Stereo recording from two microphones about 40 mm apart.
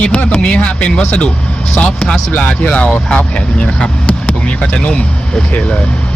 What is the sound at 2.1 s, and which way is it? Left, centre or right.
Speech, left.